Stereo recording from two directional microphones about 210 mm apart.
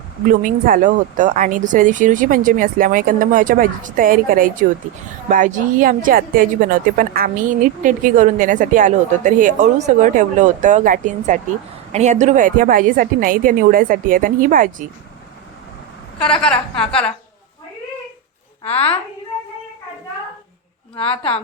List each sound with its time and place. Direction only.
0.4 s speech: 40° right (ahead or behind)
16.1 s a woman's voice: 5° left (ahead or behind)
18.6 s a woman's voice: 30° left (ahead or behind)
20.9 s a woman's voice: 25° left (ahead or behind)